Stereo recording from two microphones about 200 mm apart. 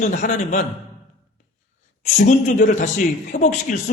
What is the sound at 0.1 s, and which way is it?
Speech, 35° left (ahead or behind).